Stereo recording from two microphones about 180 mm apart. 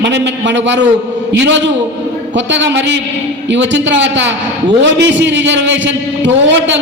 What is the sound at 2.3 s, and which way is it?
A man's voice, 90° right.